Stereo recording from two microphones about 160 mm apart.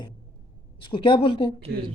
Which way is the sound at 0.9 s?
35° left (ahead or behind).